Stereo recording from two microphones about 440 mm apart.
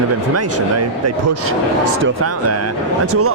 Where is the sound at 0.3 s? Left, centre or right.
Right.